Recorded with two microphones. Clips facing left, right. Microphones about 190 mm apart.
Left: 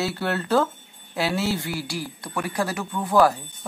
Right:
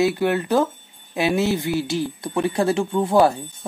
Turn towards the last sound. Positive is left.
turn(degrees=-25)  # may be behind; listen again after turning